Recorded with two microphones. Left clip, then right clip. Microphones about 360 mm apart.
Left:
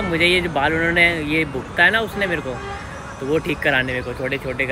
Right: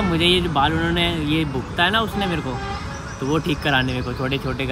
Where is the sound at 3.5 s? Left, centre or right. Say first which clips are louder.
Left 1 dB; centre.